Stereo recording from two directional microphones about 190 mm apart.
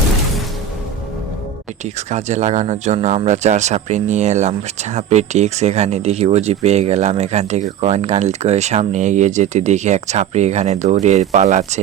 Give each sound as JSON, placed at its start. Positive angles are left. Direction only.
{"t": 1.8, "sound": "speech", "side_deg": -35}